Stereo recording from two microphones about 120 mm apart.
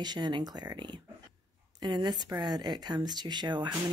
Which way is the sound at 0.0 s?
35° right (ahead or behind).